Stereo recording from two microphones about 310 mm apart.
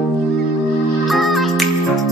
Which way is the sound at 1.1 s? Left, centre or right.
Centre.